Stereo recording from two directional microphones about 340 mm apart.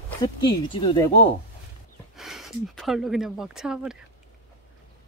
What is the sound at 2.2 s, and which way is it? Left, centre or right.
Speech, centre.